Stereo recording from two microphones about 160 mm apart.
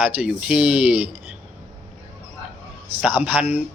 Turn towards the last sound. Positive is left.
turn(degrees=-10)  # may be behind; listen again after turning